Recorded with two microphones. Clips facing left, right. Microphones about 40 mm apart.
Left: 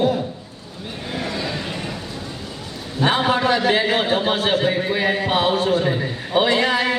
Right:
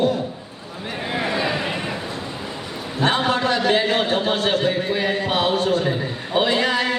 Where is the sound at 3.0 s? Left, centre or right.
Centre.